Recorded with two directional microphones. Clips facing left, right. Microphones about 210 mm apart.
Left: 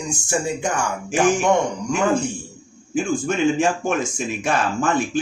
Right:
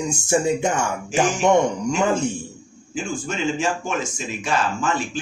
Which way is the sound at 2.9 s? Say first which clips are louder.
Left 6 dB; 55° left (ahead or behind).